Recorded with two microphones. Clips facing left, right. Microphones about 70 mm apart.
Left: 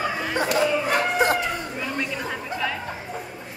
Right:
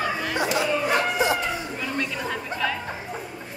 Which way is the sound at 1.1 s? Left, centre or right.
Left.